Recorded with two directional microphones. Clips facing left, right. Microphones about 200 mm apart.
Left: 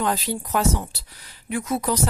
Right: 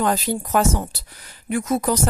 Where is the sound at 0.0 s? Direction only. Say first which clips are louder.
Right 3 dB; 50° right (ahead or behind).